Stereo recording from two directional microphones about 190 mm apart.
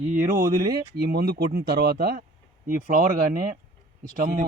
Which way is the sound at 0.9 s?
55° right (ahead or behind).